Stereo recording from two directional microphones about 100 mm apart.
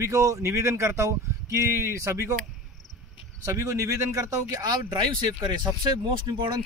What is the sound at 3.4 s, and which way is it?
Speech, 30° right (ahead or behind).